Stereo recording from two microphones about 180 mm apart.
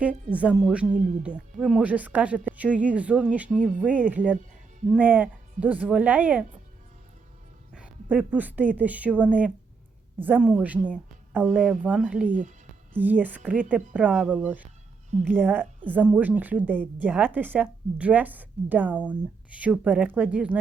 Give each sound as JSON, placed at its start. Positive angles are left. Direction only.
{"t": 0.3, "sound": "a woman's voice", "side_deg": -5}
{"t": 3.6, "sound": "speech", "side_deg": 5}
{"t": 3.8, "sound": "a woman's voice", "side_deg": -10}
{"t": 7.7, "sound": "a woman's voice", "side_deg": -5}
{"t": 12.3, "sound": "speech", "side_deg": -45}
{"t": 13.0, "sound": "a woman's voice", "side_deg": -10}